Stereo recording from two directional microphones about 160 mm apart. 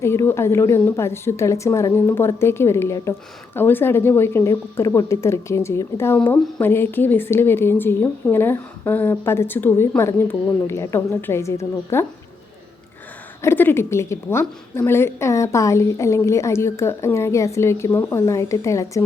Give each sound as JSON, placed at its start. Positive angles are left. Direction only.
{"t": 0.0, "sound": "a woman's voice", "side_deg": 15}
{"t": 13.4, "sound": "a woman's voice", "side_deg": 15}